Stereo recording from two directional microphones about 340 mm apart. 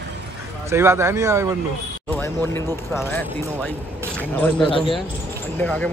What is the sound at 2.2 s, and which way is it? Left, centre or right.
Speech, centre.